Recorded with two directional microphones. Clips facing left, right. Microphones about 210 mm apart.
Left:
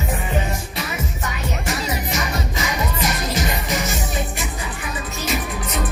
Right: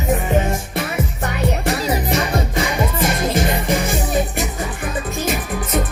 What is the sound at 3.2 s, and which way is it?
Music, 50° right (ahead or behind).